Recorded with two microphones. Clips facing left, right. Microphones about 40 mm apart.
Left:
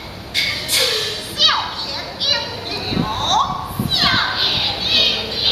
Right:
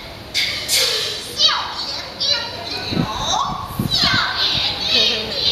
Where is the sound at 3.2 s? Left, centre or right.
Left.